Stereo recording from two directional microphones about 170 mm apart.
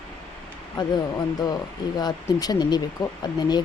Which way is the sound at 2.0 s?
25° left (ahead or behind).